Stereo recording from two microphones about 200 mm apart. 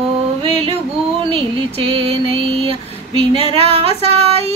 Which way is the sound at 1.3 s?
25° right (ahead or behind).